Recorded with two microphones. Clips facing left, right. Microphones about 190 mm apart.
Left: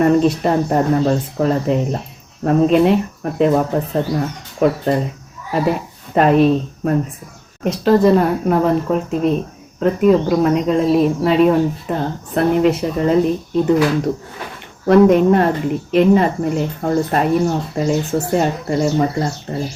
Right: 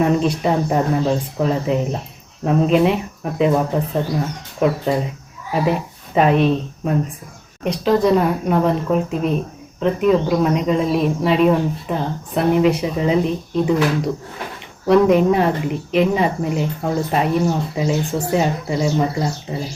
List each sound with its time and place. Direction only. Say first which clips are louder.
0.0 s speech: left 4 dB; centre (ahead or behind)
4.6 s speech: left 2 dB; centre (ahead or behind)
14.8 s speech: left 3 dB; centre (ahead or behind)